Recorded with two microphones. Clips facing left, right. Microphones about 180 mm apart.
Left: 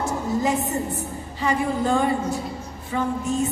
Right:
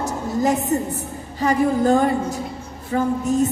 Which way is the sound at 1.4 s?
40° right (ahead or behind).